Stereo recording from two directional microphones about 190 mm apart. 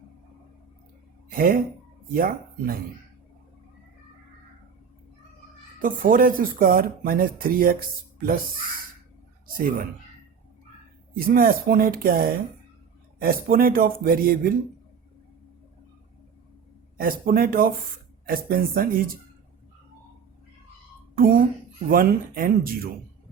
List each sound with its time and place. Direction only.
1.3 s speech: 50° right (ahead or behind)
5.8 s speech: 45° right (ahead or behind)
9.6 s speech: 45° right (ahead or behind)
11.1 s speech: 50° right (ahead or behind)
17.0 s speech: 50° right (ahead or behind)
21.2 s speech: 50° right (ahead or behind)